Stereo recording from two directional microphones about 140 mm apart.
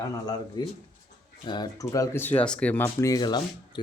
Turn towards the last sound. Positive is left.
turn(degrees=30)  # may be behind; listen again after turning